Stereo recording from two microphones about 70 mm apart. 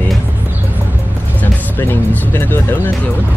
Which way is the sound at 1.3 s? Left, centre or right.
Left.